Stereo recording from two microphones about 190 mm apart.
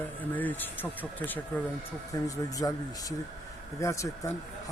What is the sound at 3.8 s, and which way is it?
Speech, 15° left (ahead or behind).